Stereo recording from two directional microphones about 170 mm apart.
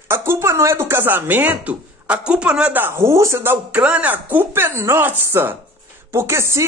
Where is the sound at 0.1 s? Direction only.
15° right (ahead or behind).